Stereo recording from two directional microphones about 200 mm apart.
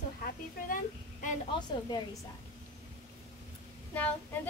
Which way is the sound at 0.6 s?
45° left (ahead or behind).